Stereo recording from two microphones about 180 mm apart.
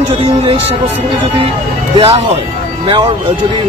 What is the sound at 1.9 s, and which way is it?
Speech, 35° right (ahead or behind).